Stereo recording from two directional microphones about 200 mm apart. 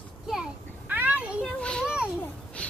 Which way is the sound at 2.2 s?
5° left (ahead or behind).